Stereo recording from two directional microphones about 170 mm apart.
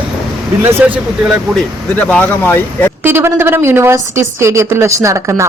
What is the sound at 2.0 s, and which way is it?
Speech, 10° left (ahead or behind).